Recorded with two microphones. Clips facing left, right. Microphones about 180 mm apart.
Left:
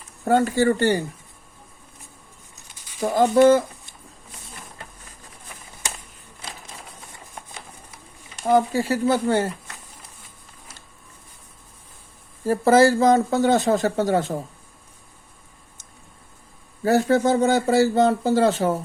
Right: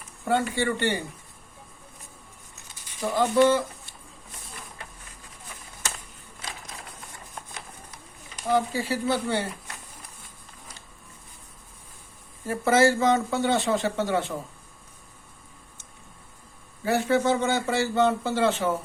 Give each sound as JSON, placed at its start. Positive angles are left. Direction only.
{"t": 0.3, "sound": "speech", "side_deg": 40}
{"t": 3.0, "sound": "speech", "side_deg": 45}
{"t": 8.5, "sound": "speech", "side_deg": 45}
{"t": 12.5, "sound": "speech", "side_deg": 35}
{"t": 16.8, "sound": "speech", "side_deg": 40}